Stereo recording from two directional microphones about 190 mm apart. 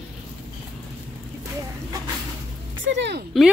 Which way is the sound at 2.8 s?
65° right (ahead or behind).